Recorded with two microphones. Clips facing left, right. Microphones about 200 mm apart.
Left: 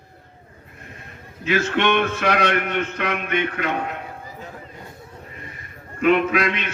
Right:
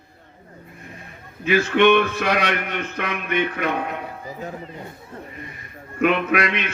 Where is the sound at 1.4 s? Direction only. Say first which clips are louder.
Right 4 dB; 60° right (ahead or behind).